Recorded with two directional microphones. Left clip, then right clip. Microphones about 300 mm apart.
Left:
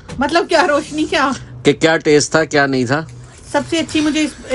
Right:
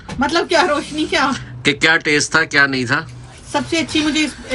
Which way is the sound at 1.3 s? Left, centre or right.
Left.